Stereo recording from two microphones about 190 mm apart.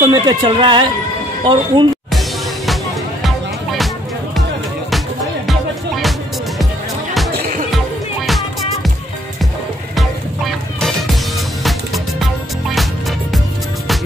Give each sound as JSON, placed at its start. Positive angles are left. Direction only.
{"t": 0.1, "sound": "speech", "side_deg": -25}
{"t": 2.1, "sound": "music", "side_deg": 0}
{"t": 5.5, "sound": "music", "side_deg": 0}
{"t": 8.3, "sound": "music", "side_deg": 0}
{"t": 9.9, "sound": "music", "side_deg": 0}